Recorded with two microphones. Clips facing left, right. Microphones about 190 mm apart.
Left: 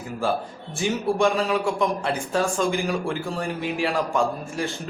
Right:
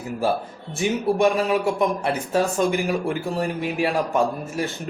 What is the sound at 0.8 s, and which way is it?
Speech, 20° right (ahead or behind).